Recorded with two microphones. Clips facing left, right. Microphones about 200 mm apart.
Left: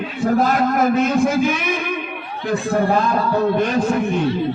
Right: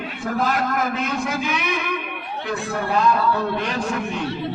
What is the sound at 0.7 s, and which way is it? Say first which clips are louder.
A man's voice: left 8 dB; 50° left (ahead or behind).